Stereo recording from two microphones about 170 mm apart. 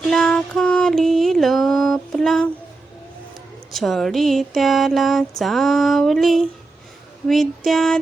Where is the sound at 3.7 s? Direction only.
Centre (ahead or behind).